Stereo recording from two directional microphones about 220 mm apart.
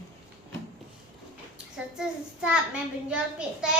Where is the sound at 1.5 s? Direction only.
5° right (ahead or behind).